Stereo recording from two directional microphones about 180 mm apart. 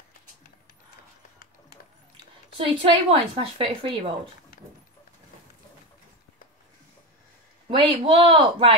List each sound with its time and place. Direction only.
2.5 s speech: 30° right (ahead or behind)
7.7 s speech: 30° right (ahead or behind)